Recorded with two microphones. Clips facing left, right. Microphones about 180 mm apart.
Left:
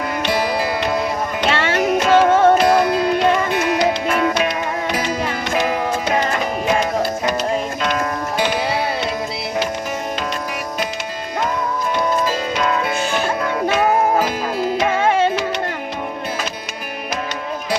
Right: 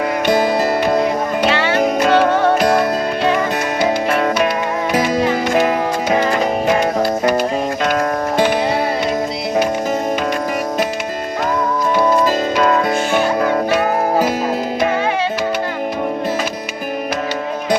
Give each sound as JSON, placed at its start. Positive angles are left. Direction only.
{"t": 0.3, "sound": "music", "side_deg": -50}
{"t": 2.0, "sound": "music", "side_deg": -60}
{"t": 7.9, "sound": "music", "side_deg": -45}
{"t": 13.4, "sound": "music", "side_deg": -50}